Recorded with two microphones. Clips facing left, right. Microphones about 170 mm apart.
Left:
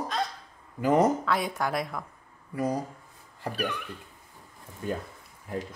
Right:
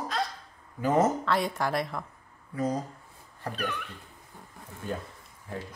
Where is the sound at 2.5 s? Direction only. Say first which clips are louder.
Left 1 dB; 10° left (ahead or behind).